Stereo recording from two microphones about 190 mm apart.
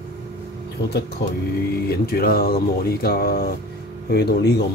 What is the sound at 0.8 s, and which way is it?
Speech, 60° left (ahead or behind).